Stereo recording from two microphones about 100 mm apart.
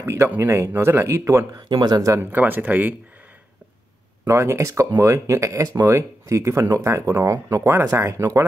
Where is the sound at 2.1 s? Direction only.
20° right (ahead or behind).